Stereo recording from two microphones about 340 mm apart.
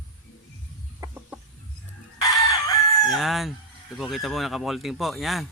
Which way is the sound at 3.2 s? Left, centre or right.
Centre.